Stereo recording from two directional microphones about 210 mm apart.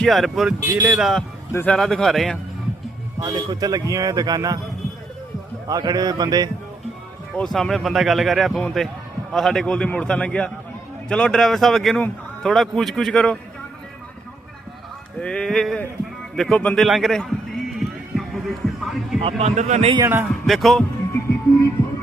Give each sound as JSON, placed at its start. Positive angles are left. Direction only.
{"t": 0.0, "sound": "speech", "side_deg": 0}
{"t": 3.2, "sound": "speech", "side_deg": -20}
{"t": 5.6, "sound": "a man's voice", "side_deg": -15}
{"t": 7.3, "sound": "speech", "side_deg": 0}
{"t": 15.2, "sound": "speech", "side_deg": 5}
{"t": 17.7, "sound": "music", "side_deg": 0}
{"t": 19.2, "sound": "a man's voice", "side_deg": -30}
{"t": 20.0, "sound": "speech", "side_deg": -10}